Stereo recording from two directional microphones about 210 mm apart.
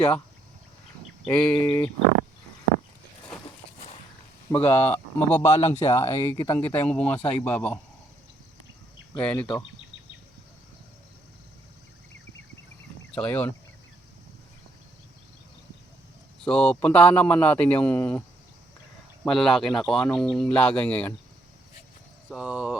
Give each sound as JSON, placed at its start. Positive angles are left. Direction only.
{"t": 1.2, "sound": "speech", "side_deg": 5}
{"t": 4.5, "sound": "speech", "side_deg": 10}
{"t": 5.5, "sound": "speech", "side_deg": 25}
{"t": 5.9, "sound": "speech", "side_deg": 15}
{"t": 9.2, "sound": "speech", "side_deg": 5}
{"t": 13.1, "sound": "speech", "side_deg": 5}
{"t": 16.4, "sound": "speech", "side_deg": 5}
{"t": 19.2, "sound": "speech", "side_deg": 0}
{"t": 22.3, "sound": "speech", "side_deg": -5}